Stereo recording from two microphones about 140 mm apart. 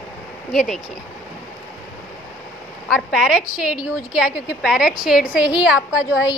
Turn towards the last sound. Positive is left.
turn(degrees=-5)  # may be behind; listen again after turning